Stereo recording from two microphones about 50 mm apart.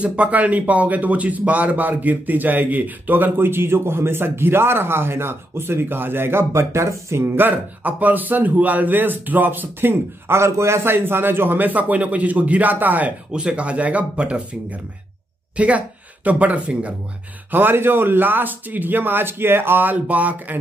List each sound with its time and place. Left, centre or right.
0.0 s speech: right
7.3 s a man's voice: right
10.9 s a man's voice: right
13.3 s a woman's voice: right
17.5 s speech: right